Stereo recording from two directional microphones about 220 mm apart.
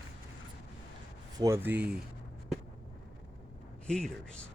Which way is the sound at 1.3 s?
15° right (ahead or behind).